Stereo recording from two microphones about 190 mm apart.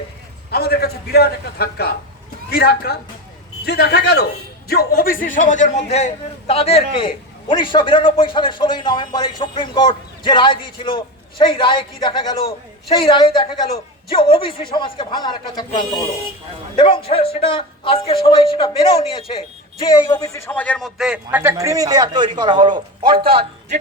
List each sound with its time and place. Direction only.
0.5 s a man's voice: 55° left (ahead or behind); by 19.5 s 30° left (ahead or behind)
19.9 s a man's voice: 20° left (ahead or behind); by 23.5 s 30° right (ahead or behind)